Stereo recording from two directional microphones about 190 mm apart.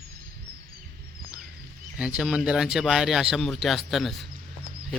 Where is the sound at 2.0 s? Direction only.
5° right (ahead or behind).